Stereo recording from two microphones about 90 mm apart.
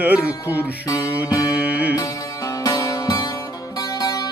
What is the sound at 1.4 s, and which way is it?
Music, 15° right (ahead or behind).